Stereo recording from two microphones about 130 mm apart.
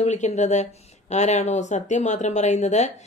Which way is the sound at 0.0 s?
65° left (ahead or behind).